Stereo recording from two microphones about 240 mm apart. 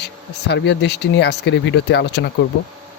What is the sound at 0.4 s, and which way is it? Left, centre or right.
Speech, left.